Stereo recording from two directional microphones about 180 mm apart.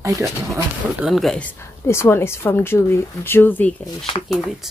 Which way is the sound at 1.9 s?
15° left (ahead or behind).